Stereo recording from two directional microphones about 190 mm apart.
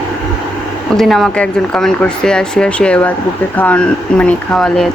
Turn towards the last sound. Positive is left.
turn(degrees=5)  # may be behind; listen again after turning